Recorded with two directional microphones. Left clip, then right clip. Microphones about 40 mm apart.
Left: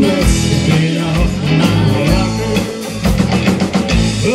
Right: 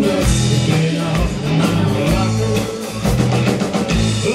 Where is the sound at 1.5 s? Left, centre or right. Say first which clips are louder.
Left 3 dB; left.